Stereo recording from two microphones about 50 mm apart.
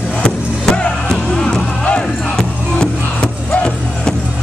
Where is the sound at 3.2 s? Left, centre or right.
Left.